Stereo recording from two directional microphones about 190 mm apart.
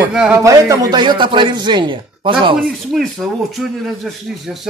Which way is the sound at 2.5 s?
Centre (ahead or behind).